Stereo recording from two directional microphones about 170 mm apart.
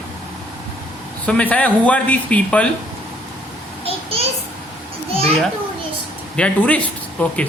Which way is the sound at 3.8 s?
35° right (ahead or behind).